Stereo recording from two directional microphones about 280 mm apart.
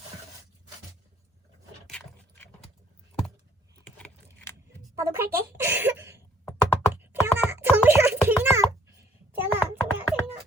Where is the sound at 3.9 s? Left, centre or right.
Centre.